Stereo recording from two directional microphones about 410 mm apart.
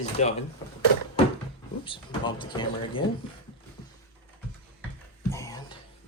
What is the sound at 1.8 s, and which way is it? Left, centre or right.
Speech, centre.